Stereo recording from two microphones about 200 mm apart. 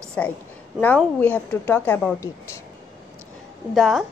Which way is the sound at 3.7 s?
Centre (ahead or behind).